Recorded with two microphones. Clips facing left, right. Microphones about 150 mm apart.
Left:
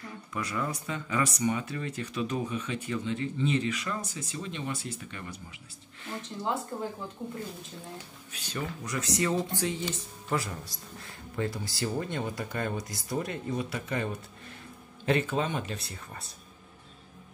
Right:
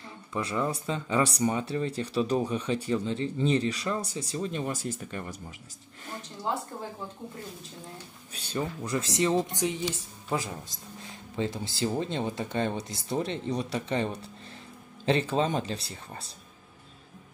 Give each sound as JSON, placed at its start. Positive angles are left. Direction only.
{"t": 0.3, "sound": "speech", "side_deg": -25}
{"t": 8.3, "sound": "speech", "side_deg": -30}
{"t": 11.0, "sound": "speech", "side_deg": -20}